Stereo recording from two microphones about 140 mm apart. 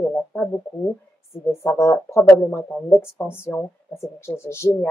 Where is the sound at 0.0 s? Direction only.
10° left (ahead or behind).